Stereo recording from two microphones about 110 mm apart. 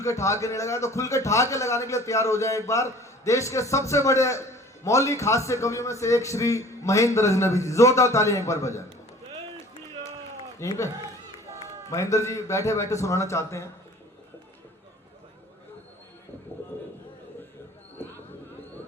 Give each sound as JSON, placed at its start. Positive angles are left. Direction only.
{"t": 0.0, "sound": "a man's voice", "side_deg": 30}
{"t": 10.6, "sound": "a man's voice", "side_deg": 25}